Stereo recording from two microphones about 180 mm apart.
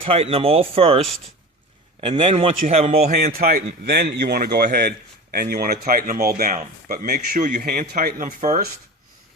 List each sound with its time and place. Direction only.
0.0 s a man's voice: 30° right (ahead or behind)
3.3 s a man's voice: 55° right (ahead or behind)